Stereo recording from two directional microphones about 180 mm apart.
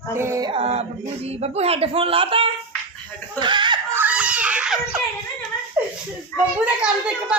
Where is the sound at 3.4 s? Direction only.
25° right (ahead or behind).